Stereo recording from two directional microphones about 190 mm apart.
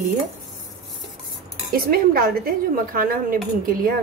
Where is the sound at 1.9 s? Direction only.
50° right (ahead or behind).